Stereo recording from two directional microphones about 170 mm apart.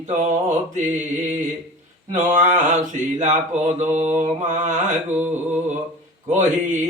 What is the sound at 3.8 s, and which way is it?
Mantra, 45° right (ahead or behind).